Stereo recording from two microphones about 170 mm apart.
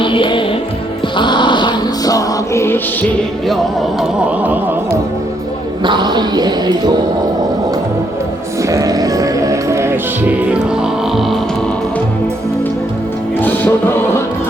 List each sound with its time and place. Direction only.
0.0 s music: 30° left (ahead or behind)
4.4 s music: 10° right (ahead or behind)
5.8 s speech: 25° right (ahead or behind)
8.7 s music: 20° right (ahead or behind); by 11.3 s centre (ahead or behind)
13.4 s music: 10° left (ahead or behind)